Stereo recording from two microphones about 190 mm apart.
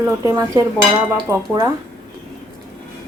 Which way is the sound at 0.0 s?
15° right (ahead or behind).